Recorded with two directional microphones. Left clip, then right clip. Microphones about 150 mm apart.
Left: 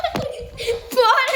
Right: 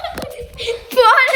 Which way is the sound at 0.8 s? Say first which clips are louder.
Right 5 dB; centre (ahead or behind).